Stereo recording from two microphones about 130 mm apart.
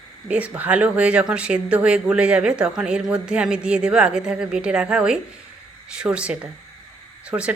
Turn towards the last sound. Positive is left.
turn(degrees=-10)  # may be behind; listen again after turning